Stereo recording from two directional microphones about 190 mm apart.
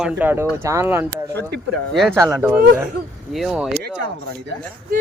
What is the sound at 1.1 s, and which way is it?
Speech, 60° right (ahead or behind).